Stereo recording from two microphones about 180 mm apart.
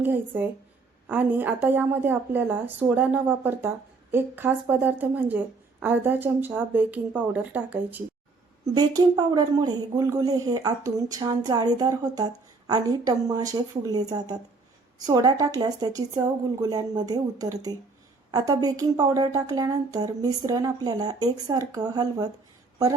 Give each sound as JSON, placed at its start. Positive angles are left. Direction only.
{"t": 0.0, "sound": "a woman's voice", "side_deg": -10}
{"t": 8.6, "sound": "speech", "side_deg": -20}